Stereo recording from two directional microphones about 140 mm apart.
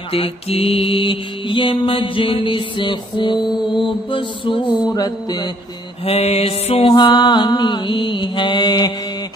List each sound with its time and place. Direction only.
0.1 s mantra: 45° left (ahead or behind)
4.8 s music: 25° left (ahead or behind)
6.0 s music: 45° left (ahead or behind)
6.9 s mantra: 30° left (ahead or behind)